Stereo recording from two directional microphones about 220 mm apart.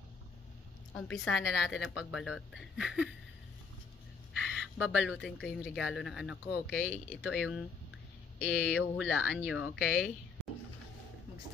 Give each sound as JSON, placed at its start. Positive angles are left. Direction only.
{"t": 0.9, "sound": "a woman's voice", "side_deg": 5}
{"t": 4.4, "sound": "a woman's voice", "side_deg": -5}